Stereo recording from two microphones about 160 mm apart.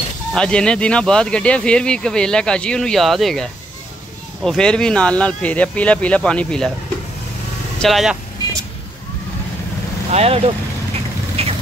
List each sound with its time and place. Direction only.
0.3 s speech: 5° left (ahead or behind)
7.8 s speech: centre (ahead or behind)
10.1 s speech: 40° right (ahead or behind)
11.4 s a sound: 40° right (ahead or behind)